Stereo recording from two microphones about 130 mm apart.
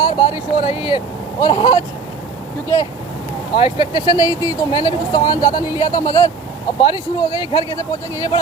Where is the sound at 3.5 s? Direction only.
40° left (ahead or behind).